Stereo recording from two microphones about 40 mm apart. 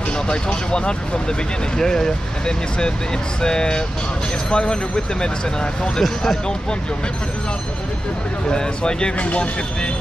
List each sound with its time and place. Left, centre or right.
0.3 s speech: left
5.9 s speech: centre
8.5 s speech: left
9.2 s speech: left